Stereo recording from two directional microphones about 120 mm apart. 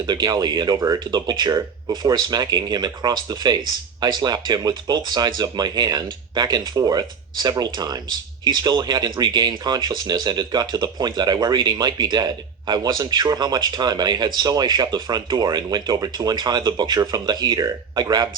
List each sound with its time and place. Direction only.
0.0 s speech: 35° right (ahead or behind)